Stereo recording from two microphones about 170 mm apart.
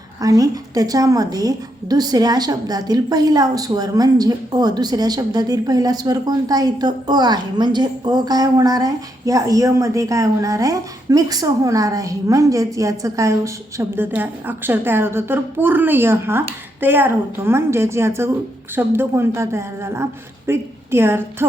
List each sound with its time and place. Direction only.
0.2 s a woman's voice: 20° right (ahead or behind)